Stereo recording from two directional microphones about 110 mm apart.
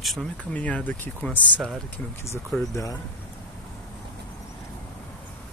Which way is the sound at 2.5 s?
20° left (ahead or behind).